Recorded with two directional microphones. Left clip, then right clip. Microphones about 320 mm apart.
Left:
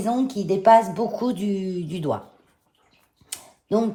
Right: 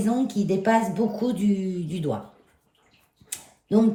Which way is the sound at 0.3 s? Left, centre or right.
Centre.